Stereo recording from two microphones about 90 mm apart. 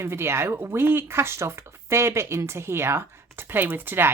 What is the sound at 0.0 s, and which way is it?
Speech, 30° right (ahead or behind).